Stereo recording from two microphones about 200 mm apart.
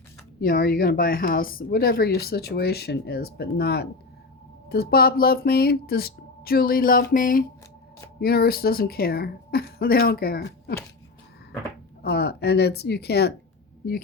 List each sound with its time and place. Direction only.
0.3 s a woman's voice: 50° left (ahead or behind)
12.0 s a woman's voice: 55° left (ahead or behind)